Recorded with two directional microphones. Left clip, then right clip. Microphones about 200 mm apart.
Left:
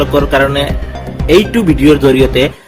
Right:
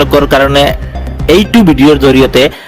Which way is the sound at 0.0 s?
45° right (ahead or behind).